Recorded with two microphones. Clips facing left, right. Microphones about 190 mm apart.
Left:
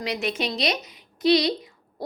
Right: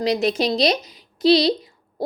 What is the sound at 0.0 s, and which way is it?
A woman's voice, 35° right (ahead or behind).